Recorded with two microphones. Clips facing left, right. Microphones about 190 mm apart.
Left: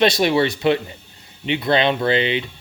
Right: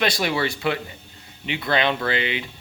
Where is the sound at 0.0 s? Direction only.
25° left (ahead or behind).